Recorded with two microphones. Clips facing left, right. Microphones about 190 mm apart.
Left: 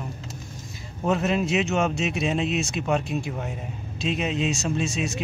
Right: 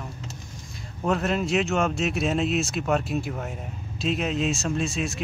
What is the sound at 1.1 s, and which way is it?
Speech, centre (ahead or behind).